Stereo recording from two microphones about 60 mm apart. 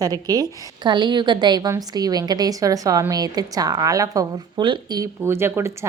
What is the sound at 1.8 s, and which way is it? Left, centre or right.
A woman's voice, right.